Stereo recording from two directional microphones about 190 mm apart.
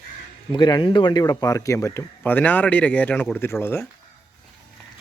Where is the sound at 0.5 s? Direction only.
25° left (ahead or behind).